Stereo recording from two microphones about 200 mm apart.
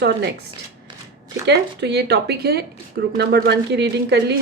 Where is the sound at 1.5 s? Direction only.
60° right (ahead or behind).